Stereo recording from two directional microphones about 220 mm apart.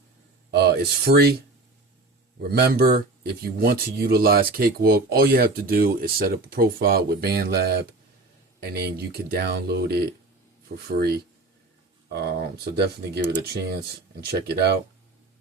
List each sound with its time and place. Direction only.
0.5 s speech: 45° right (ahead or behind)
2.4 s speech: 45° right (ahead or behind)
12.2 s speech: 45° right (ahead or behind)